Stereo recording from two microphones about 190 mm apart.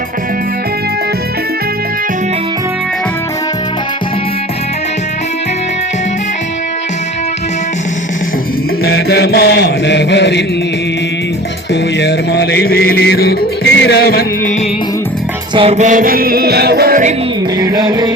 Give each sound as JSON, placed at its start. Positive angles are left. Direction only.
{"t": 8.8, "sound": "chant", "side_deg": 60}
{"t": 11.7, "sound": "music", "side_deg": 65}
{"t": 15.5, "sound": "music", "side_deg": -35}
{"t": 17.6, "sound": "music", "side_deg": -20}